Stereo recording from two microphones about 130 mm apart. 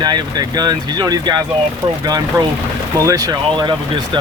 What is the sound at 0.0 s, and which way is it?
Speech, 30° right (ahead or behind).